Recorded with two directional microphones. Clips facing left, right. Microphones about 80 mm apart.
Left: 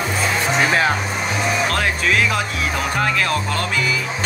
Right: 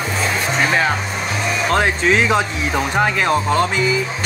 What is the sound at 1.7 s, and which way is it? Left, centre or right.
Speech, right.